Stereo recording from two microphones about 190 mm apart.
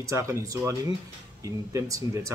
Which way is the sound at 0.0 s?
15° right (ahead or behind).